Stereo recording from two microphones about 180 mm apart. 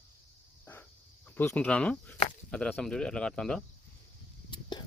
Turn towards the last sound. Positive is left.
turn(degrees=25)  # may be behind; listen again after turning